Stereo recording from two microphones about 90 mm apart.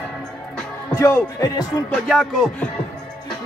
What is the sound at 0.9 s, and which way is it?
Music, 30° left (ahead or behind).